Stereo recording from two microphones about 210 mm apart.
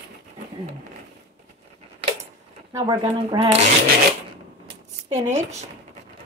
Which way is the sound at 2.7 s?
20° right (ahead or behind).